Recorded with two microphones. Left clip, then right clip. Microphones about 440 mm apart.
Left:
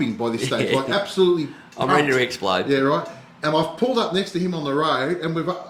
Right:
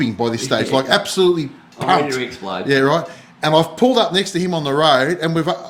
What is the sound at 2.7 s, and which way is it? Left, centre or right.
Speech, right.